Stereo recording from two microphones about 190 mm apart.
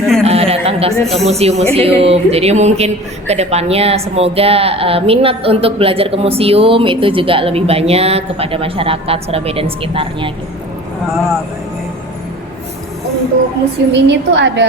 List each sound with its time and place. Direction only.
0.2 s a sound: 30° right (ahead or behind)
1.1 s a woman's voice: 35° right (ahead or behind)
13.9 s a woman's voice: 65° right (ahead or behind)